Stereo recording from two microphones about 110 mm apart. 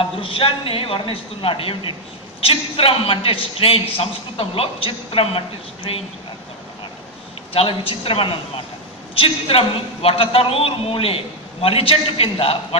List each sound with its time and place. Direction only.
0.0 s a man's voice: 55° left (ahead or behind)
7.5 s a man's voice: 60° left (ahead or behind)